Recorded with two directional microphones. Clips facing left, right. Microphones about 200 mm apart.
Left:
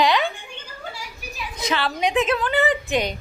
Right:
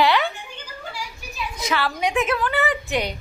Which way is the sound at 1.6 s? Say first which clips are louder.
Left 1 dB; 20° left (ahead or behind).